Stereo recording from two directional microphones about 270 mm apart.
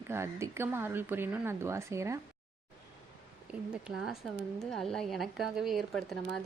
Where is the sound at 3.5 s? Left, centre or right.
Centre.